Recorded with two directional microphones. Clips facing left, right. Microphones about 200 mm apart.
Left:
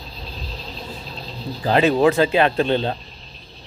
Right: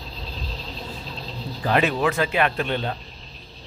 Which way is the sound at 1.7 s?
30° left (ahead or behind).